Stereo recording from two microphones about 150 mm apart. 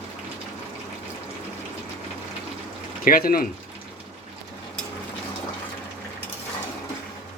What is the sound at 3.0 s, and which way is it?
Speech, 70° left (ahead or behind).